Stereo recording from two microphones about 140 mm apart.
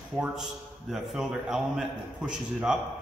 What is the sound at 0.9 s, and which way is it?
A man's voice, 5° right (ahead or behind).